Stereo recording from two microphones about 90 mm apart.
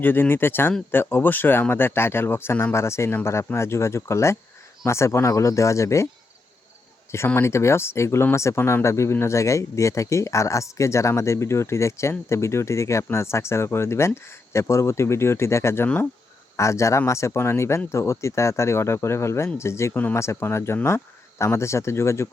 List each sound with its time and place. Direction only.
0.0 s speech: 25° left (ahead or behind)
7.4 s speech: 30° left (ahead or behind)